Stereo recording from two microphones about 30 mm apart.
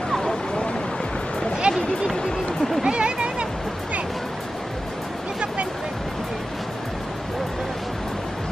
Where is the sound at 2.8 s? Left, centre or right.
Right.